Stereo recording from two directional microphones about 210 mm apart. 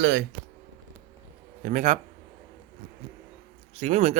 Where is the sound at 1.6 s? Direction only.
35° right (ahead or behind).